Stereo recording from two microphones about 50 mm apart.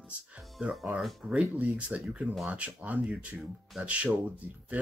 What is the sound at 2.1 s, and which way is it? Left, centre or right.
Speech, right.